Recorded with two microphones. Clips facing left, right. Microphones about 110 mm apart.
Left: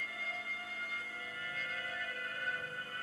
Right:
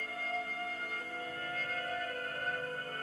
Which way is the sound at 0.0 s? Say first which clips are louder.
Right 6 dB; 40° right (ahead or behind).